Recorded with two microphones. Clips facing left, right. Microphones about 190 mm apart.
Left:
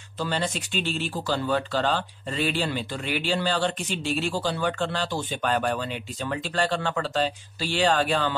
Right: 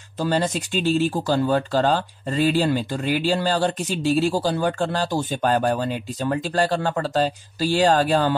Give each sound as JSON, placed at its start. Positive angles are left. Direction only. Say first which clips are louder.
{"t": 0.2, "sound": "speech", "louder": "right 6 dB", "side_deg": -40}